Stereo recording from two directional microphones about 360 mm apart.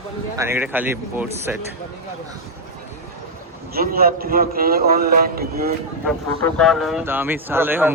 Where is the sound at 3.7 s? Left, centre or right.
Right.